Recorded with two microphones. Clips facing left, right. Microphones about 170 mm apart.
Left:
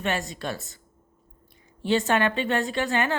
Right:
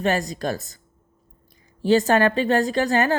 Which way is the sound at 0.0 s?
40° right (ahead or behind).